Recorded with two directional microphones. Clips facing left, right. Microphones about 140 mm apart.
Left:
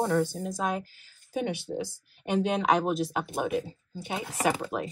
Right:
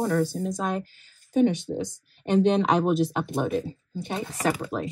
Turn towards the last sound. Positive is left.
turn(degrees=15)  # may be behind; listen again after turning